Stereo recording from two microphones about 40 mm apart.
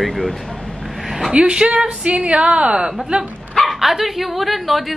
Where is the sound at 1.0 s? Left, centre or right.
Centre.